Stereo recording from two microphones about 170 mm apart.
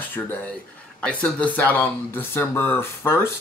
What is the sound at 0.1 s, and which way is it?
Speech, 10° left (ahead or behind).